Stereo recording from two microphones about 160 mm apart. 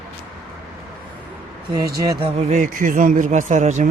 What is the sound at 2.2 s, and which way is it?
Speech, 40° right (ahead or behind).